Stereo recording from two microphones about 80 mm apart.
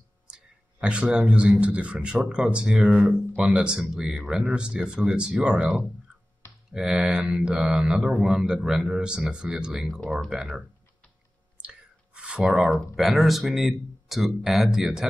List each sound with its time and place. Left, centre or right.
0.3 s speech: centre
9.9 s speech: centre
10.3 s speech: centre
11.6 s clicking: centre
12.7 s speech: centre